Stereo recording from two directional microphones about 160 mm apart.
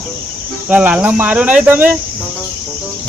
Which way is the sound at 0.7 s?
10° right (ahead or behind).